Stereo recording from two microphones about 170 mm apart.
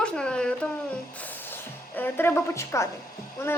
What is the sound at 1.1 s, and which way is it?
Music, 10° left (ahead or behind).